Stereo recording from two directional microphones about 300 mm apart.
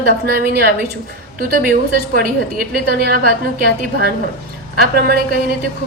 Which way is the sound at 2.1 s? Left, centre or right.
Right.